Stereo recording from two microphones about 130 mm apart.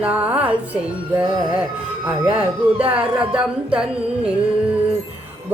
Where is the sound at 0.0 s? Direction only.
10° right (ahead or behind).